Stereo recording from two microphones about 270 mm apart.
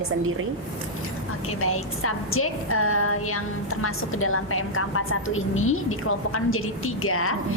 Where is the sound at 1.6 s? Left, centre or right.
Left.